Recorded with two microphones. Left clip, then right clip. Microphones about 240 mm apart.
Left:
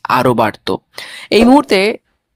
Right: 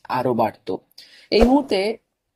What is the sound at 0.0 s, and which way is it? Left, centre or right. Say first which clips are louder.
Speech: left 9 dB; left.